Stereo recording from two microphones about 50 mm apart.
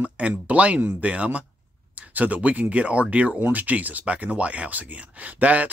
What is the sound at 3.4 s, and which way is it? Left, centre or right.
Speech, right.